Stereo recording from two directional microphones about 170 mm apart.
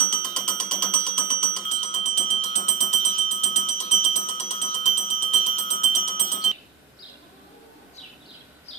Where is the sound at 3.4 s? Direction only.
40° left (ahead or behind).